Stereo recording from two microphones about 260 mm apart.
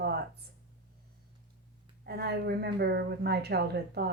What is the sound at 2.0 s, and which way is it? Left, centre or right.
Speech, right.